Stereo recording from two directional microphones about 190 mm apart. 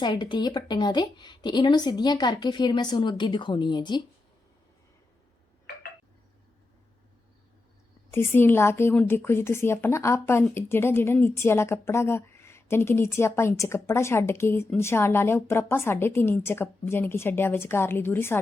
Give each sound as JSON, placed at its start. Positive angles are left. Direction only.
{"t": 0.0, "sound": "a woman's voice", "side_deg": 25}
{"t": 8.1, "sound": "a woman's voice", "side_deg": 10}